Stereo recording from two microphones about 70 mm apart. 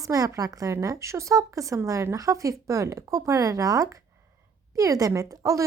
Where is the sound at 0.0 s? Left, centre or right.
Right.